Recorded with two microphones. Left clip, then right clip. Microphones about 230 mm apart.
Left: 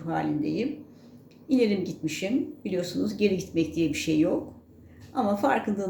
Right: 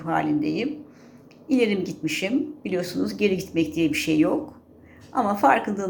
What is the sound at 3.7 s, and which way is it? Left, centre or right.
Speech, centre.